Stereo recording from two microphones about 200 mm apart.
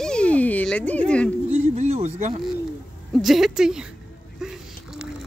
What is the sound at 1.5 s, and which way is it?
Speech, 35° right (ahead or behind).